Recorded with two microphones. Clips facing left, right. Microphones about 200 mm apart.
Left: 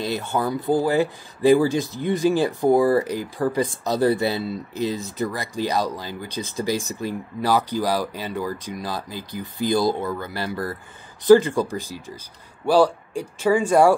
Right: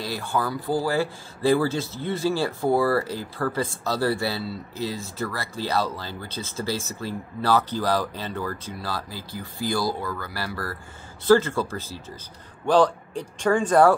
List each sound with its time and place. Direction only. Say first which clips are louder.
0.0 s speech: left 3 dB; 20° left (ahead or behind)